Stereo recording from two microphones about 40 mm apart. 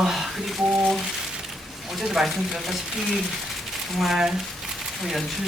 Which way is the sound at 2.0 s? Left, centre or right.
Centre.